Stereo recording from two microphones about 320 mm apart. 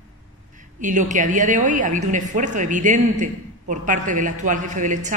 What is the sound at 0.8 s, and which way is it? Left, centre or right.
Speech, right.